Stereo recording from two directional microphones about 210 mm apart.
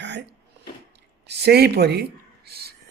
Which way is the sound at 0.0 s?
55° right (ahead or behind).